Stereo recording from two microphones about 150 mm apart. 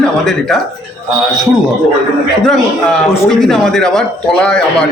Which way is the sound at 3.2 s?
Centre (ahead or behind).